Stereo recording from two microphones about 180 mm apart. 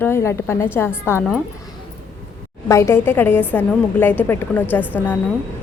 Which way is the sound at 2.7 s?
15° left (ahead or behind).